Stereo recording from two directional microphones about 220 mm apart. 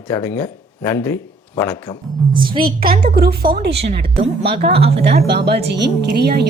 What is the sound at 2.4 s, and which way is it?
Speech, 20° right (ahead or behind).